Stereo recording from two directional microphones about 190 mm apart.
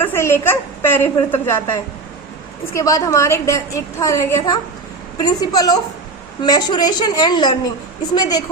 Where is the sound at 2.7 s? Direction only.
15° left (ahead or behind).